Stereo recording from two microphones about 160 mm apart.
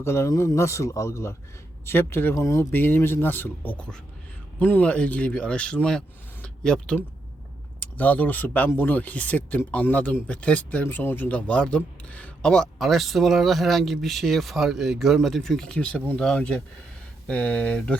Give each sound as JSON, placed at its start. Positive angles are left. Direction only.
{"t": 0.0, "sound": "speech", "side_deg": 15}
{"t": 6.4, "sound": "a sound", "side_deg": 5}
{"t": 7.9, "sound": "speech", "side_deg": 10}